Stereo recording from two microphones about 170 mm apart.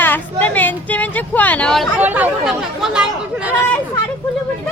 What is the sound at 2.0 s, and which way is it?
Speech, 10° right (ahead or behind).